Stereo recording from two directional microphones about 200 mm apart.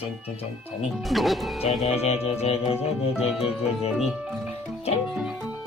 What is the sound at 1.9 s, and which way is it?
Music, 30° left (ahead or behind).